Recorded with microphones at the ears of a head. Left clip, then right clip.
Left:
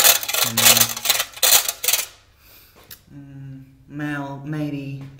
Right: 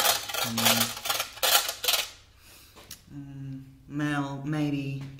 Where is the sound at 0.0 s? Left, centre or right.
Left.